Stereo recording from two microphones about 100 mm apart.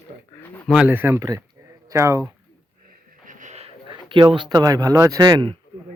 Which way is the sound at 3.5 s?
90° right.